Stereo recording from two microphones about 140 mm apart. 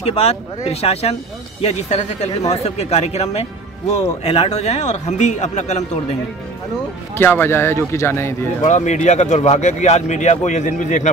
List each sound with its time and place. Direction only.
0.0 s a man's voice: 50° left (ahead or behind)
7.2 s a man's voice: 15° left (ahead or behind)
8.6 s speech: 60° left (ahead or behind)